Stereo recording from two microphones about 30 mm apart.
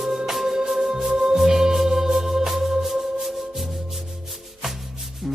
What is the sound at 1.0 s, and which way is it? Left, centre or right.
Music, centre.